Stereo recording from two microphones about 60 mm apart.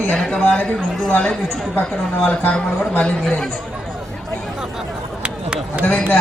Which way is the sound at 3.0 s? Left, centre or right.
Centre.